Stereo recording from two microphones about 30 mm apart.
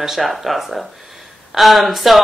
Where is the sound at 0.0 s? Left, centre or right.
Centre.